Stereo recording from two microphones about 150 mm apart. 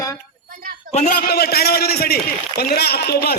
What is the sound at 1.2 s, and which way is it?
A man's voice, 90° left.